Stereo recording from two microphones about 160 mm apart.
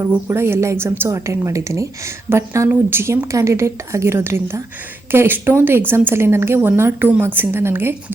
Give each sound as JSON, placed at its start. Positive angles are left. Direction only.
{"t": 0.3, "sound": "a woman's voice", "side_deg": -15}